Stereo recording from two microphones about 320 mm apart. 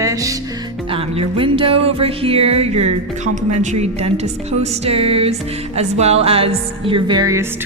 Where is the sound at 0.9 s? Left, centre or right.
Centre.